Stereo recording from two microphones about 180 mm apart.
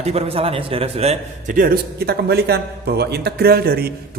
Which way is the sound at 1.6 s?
60° right (ahead or behind).